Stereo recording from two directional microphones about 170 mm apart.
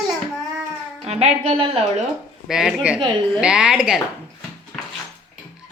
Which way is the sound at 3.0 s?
30° right (ahead or behind).